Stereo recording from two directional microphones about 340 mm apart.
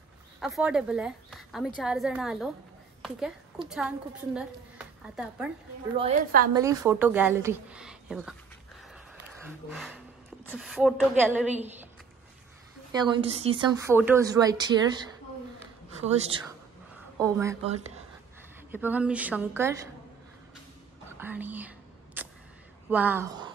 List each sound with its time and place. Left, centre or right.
0.4 s a woman's voice: centre
5.9 s a woman's voice: right
6.5 s a woman's voice: centre
9.7 s a woman's voice: centre
12.9 s a woman's voice: centre
17.2 s a woman's voice: centre
18.7 s a woman's voice: centre
21.2 s whispering: centre
22.8 s speech: centre